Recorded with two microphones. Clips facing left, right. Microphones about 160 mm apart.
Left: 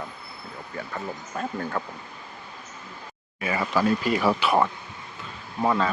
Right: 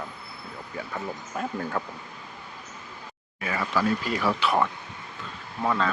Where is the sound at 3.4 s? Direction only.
15° left (ahead or behind).